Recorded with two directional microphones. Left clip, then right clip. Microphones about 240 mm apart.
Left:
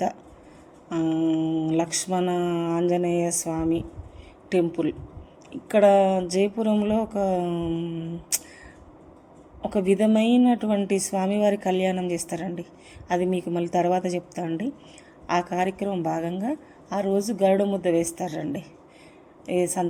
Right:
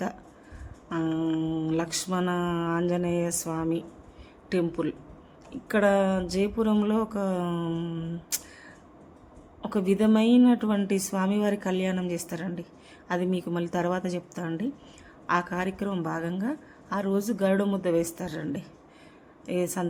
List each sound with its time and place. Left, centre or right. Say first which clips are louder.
0.9 s speech: left 4 dB; centre
9.6 s a woman's voice: left 4 dB; centre
17.2 s speech: left 3 dB; right
17.4 s speech: left 6 dB; centre
19.5 s speech: left 5 dB; centre